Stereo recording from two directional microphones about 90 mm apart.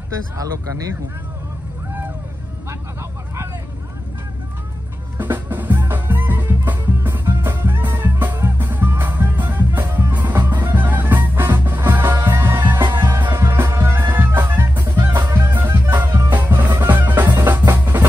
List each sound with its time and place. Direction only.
5.1 s music: 20° right (ahead or behind)